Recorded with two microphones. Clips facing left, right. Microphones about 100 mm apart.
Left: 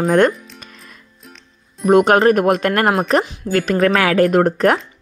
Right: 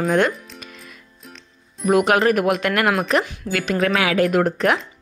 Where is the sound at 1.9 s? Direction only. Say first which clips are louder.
Left 5 dB; 35° left (ahead or behind).